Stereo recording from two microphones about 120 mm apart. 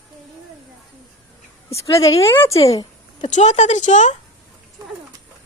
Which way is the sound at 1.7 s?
25° left (ahead or behind).